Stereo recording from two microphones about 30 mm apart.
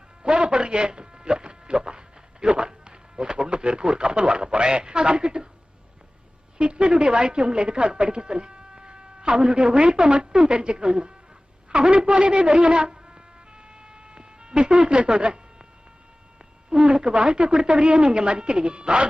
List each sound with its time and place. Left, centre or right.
0.2 s a sound: right
4.5 s speech: right
6.6 s a woman's voice: right
13.7 s cat: right
16.6 s speech: right